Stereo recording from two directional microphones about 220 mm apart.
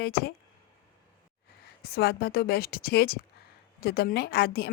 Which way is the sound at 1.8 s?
45° left (ahead or behind).